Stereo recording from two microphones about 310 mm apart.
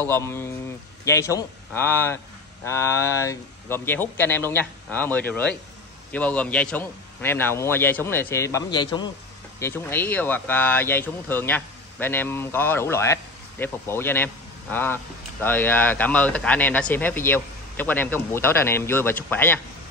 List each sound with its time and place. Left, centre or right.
0.0 s speech: centre